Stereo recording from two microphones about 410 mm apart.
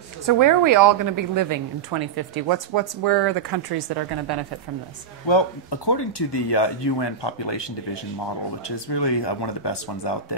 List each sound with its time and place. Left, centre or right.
0.3 s a woman's voice: right
5.2 s speech: left